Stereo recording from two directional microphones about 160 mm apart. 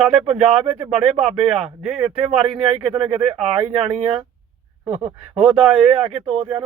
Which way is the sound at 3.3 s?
10° right (ahead or behind).